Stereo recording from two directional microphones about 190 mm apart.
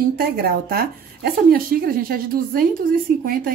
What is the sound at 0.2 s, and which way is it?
A woman's voice, 55° right (ahead or behind).